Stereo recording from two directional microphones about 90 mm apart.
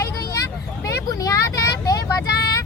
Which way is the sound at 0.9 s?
40° left (ahead or behind).